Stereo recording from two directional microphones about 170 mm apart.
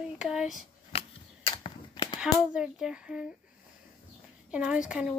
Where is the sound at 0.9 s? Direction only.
35° left (ahead or behind).